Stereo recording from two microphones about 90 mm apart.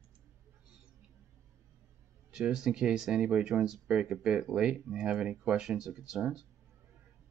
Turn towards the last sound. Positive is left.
turn(degrees=-10)  # may be behind; listen again after turning